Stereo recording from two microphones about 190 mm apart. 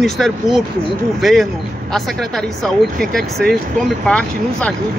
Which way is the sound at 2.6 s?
5° left (ahead or behind).